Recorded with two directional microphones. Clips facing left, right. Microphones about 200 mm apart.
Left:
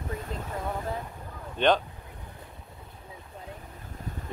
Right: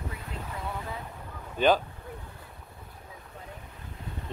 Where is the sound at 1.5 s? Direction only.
5° right (ahead or behind).